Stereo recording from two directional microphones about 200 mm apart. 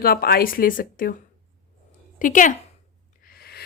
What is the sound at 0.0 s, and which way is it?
A woman's voice, 50° left (ahead or behind).